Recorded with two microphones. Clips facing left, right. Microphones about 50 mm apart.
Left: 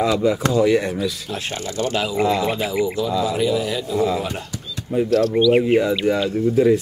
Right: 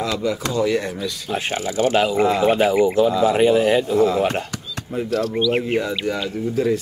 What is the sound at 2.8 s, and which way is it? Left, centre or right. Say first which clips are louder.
Speech: right 5 dB; right.